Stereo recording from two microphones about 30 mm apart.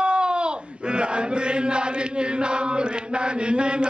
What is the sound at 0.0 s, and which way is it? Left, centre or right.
Chant, right.